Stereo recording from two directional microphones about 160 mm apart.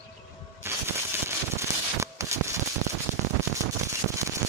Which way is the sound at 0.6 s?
15° right (ahead or behind).